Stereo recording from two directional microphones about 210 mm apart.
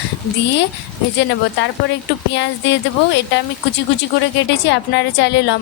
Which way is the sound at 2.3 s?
60° left (ahead or behind).